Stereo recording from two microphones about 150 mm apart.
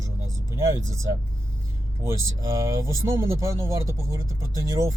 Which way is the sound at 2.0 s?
20° right (ahead or behind).